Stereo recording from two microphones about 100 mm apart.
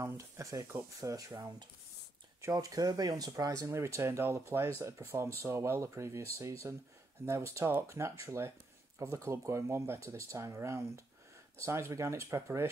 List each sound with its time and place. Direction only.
0.0 s speech: 30° right (ahead or behind)
2.5 s speech: 40° right (ahead or behind)